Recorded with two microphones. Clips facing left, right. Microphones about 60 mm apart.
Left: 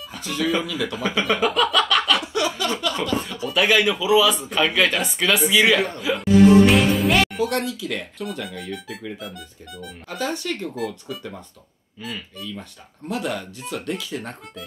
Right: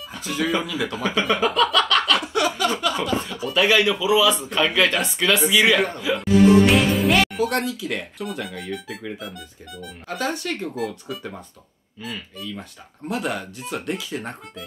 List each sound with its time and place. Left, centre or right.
0.2 s speech: centre
2.5 s a sound: centre
3.4 s speech: centre
10.1 s speech: centre
10.5 s speech: centre
13.1 s speech: centre